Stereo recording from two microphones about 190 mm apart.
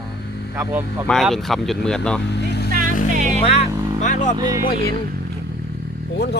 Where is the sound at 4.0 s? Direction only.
40° left (ahead or behind).